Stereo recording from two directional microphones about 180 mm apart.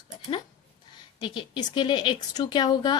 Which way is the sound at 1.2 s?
25° left (ahead or behind).